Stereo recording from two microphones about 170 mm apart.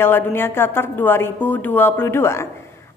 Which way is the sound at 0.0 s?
15° left (ahead or behind).